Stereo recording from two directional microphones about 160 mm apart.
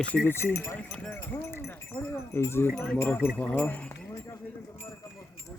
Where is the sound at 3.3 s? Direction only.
10° left (ahead or behind).